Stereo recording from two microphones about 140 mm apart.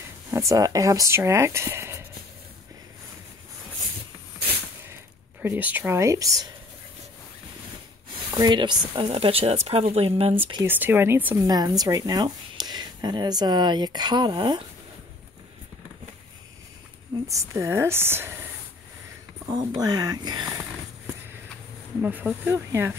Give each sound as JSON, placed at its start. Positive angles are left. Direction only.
{"t": 0.3, "sound": "speech", "side_deg": -25}
{"t": 5.4, "sound": "speech", "side_deg": -15}
{"t": 8.3, "sound": "speech", "side_deg": -35}
{"t": 10.6, "sound": "speech", "side_deg": -15}
{"t": 11.4, "sound": "speech", "side_deg": -25}
{"t": 17.3, "sound": "speech", "side_deg": -20}
{"t": 19.8, "sound": "speech", "side_deg": -30}
{"t": 22.0, "sound": "speech", "side_deg": -10}